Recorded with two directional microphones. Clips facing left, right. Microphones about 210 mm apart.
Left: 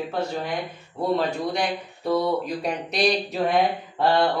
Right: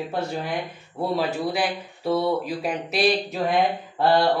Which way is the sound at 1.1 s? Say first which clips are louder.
Left 1 dB; 5° right (ahead or behind).